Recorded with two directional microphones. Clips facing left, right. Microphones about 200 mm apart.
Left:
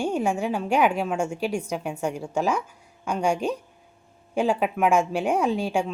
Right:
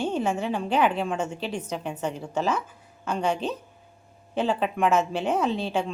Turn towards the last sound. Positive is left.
turn(degrees=10)  # may be behind; listen again after turning